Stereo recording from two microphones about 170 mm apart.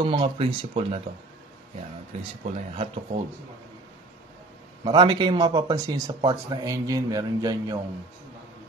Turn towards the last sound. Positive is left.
turn(degrees=-20)  # may be behind; listen again after turning